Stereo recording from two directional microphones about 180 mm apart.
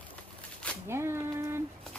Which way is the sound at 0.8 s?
15° right (ahead or behind).